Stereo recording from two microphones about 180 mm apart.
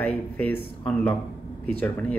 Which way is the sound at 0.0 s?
5° left (ahead or behind).